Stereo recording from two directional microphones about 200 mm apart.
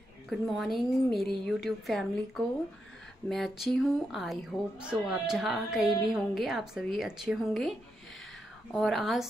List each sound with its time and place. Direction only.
0.3 s speech: centre (ahead or behind)
8.7 s speech: centre (ahead or behind)